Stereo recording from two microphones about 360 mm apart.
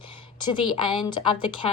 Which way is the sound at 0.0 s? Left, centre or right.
Left.